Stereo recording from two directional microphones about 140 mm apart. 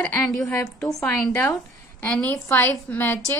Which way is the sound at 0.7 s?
5° left (ahead or behind).